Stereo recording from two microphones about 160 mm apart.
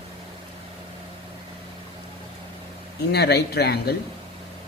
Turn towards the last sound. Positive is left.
turn(degrees=80)